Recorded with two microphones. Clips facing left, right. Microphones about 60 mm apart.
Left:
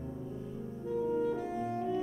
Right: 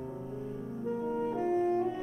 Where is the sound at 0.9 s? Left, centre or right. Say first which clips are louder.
Left 2 dB; right.